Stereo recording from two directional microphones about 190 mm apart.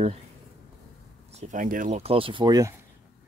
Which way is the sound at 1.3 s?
40° right (ahead or behind).